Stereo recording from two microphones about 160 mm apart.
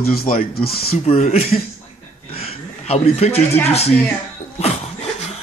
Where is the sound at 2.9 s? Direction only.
40° left (ahead or behind).